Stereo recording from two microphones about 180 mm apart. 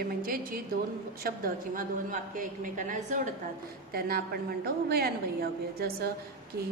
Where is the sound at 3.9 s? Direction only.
55° right (ahead or behind).